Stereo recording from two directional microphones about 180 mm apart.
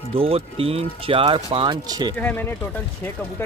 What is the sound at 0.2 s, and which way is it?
Speech, 30° right (ahead or behind).